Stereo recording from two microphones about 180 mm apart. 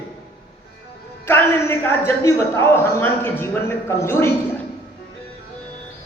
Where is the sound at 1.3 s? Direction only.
10° left (ahead or behind).